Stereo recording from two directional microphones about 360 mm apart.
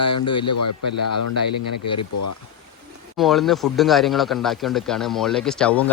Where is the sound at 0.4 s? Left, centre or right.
Left.